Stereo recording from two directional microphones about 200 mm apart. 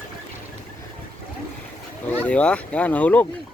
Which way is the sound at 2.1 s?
5° left (ahead or behind).